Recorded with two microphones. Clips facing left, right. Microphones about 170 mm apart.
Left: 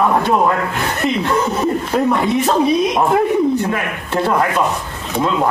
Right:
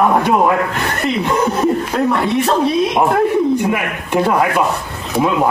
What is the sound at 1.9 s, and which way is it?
Speech, centre (ahead or behind).